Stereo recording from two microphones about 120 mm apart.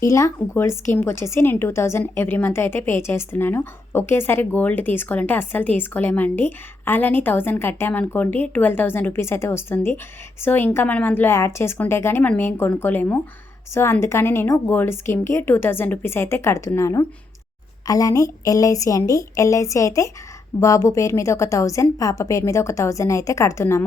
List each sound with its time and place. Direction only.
0.0 s a woman's voice: 25° left (ahead or behind)